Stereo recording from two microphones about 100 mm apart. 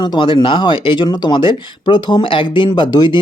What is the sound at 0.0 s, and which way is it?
Speech, 55° left (ahead or behind).